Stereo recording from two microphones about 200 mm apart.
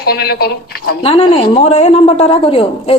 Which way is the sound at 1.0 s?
30° left (ahead or behind).